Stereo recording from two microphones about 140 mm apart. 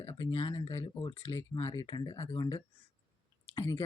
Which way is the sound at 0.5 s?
20° left (ahead or behind).